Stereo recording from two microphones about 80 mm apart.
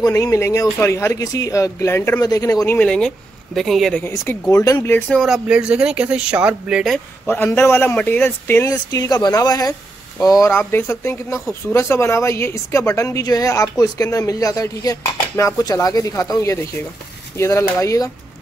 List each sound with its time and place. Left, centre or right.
0.0 s a woman's voice: left
2.1 s a woman's voice: left
3.5 s speech: centre
4.1 s a woman's voice: left
5.2 s speech: centre
7.2 s a man's voice: left
8.6 s a woman's voice: left
10.7 s a woman's voice: left